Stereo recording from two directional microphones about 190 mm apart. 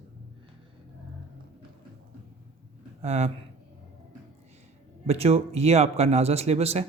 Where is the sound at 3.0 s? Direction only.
35° right (ahead or behind).